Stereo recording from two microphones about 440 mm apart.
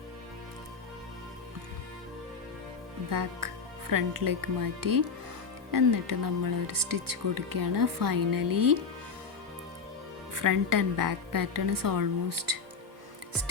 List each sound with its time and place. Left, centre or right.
3.1 s speech: right
10.3 s speech: right